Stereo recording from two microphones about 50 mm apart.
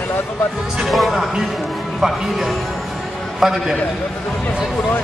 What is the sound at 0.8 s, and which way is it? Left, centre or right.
A man's voice, centre.